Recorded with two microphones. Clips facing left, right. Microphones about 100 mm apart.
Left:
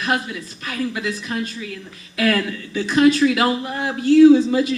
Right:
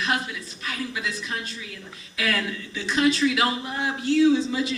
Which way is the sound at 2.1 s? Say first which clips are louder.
Left 7 dB; 50° left (ahead or behind).